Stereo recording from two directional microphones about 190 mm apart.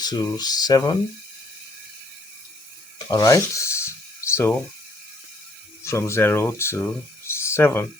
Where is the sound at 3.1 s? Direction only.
20° left (ahead or behind).